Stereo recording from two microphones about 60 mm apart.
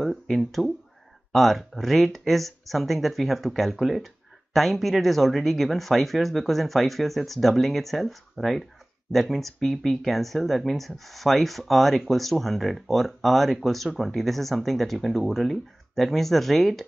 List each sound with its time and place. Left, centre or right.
0.0 s speech: centre